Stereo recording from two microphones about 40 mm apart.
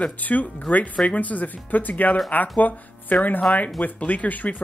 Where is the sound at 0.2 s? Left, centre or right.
Left.